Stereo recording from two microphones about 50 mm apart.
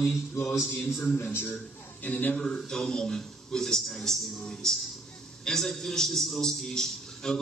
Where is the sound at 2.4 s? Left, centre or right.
Centre.